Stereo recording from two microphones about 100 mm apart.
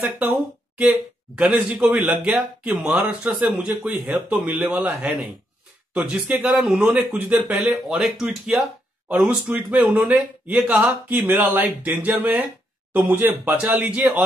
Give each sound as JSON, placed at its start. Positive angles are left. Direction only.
{"t": 0.3, "sound": "speech", "side_deg": -10}
{"t": 5.9, "sound": "speech", "side_deg": -15}
{"t": 6.8, "sound": "speech", "side_deg": -15}
{"t": 8.0, "sound": "speech", "side_deg": -5}
{"t": 9.1, "sound": "speech", "side_deg": -15}